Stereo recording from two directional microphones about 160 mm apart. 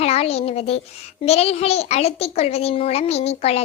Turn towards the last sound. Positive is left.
turn(degrees=40)  # may be behind; listen again after turning